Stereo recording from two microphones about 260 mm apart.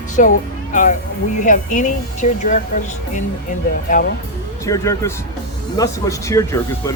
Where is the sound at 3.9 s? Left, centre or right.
Left.